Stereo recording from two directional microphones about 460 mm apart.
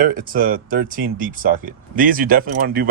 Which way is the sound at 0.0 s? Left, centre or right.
Centre.